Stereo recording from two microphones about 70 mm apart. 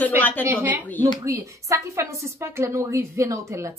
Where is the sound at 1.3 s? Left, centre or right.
Right.